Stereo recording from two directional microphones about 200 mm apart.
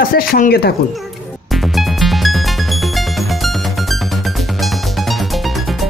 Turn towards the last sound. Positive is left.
turn(degrees=0)  # may be behind; listen again after turning